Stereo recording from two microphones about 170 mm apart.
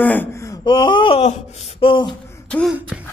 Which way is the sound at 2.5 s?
5° left (ahead or behind).